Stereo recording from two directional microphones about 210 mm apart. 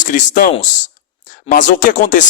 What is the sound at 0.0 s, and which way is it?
Speech, 40° left (ahead or behind).